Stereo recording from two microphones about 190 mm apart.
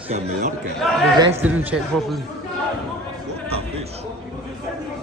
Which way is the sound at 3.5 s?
35° right (ahead or behind).